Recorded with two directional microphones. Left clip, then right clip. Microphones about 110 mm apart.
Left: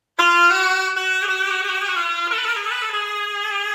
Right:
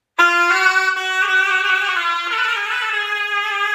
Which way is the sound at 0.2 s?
5° right (ahead or behind).